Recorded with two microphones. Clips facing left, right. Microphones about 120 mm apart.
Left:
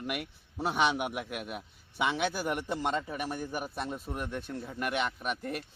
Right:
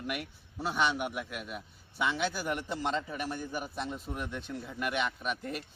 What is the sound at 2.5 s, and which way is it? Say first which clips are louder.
A man's voice: left 1 dB; 10° left (ahead or behind).